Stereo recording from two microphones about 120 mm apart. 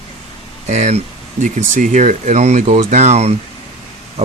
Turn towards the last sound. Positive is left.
turn(degrees=-65)  # may be behind; listen again after turning